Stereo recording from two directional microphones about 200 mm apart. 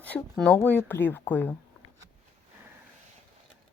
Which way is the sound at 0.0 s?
5° left (ahead or behind).